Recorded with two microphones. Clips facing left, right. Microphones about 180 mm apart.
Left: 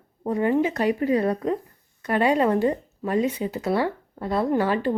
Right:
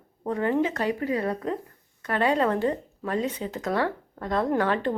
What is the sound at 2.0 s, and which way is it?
Speech, 15° left (ahead or behind).